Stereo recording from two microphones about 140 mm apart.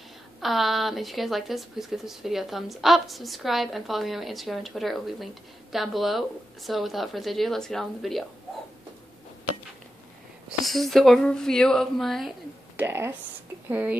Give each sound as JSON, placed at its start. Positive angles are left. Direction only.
{"t": 0.4, "sound": "speech", "side_deg": 0}
{"t": 10.6, "sound": "speech", "side_deg": 0}
{"t": 12.7, "sound": "speech", "side_deg": -15}